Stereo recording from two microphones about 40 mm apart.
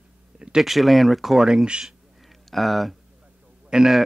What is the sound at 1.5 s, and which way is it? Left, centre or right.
Speech, right.